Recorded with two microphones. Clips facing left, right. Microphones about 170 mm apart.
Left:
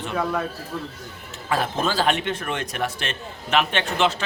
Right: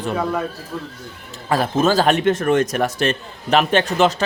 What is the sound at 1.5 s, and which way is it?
Speech, 40° right (ahead or behind).